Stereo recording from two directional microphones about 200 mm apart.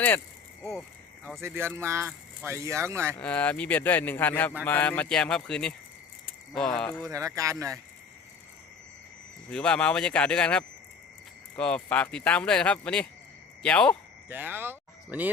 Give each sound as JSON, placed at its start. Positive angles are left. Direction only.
{"t": 1.4, "sound": "speech", "side_deg": -10}
{"t": 3.2, "sound": "a man's voice", "side_deg": 5}
{"t": 7.1, "sound": "speech", "side_deg": -15}
{"t": 9.5, "sound": "speech", "side_deg": 5}
{"t": 14.3, "sound": "speech", "side_deg": -10}